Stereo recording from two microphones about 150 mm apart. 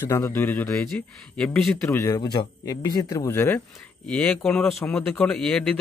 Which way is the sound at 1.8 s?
20° left (ahead or behind).